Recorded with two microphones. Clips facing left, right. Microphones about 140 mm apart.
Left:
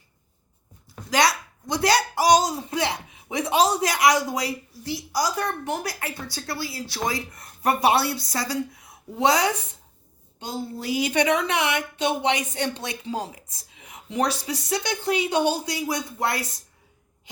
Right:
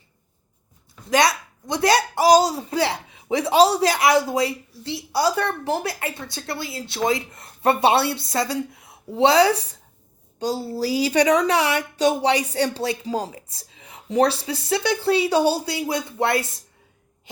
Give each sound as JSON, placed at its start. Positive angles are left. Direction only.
{"t": 1.1, "sound": "speech", "side_deg": -20}